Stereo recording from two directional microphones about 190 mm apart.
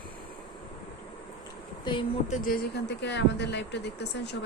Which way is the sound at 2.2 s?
45° left (ahead or behind).